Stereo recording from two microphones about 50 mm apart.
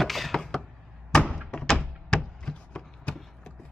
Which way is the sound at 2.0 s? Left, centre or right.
Centre.